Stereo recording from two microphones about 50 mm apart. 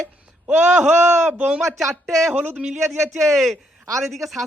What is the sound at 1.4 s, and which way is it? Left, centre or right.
Speech, right.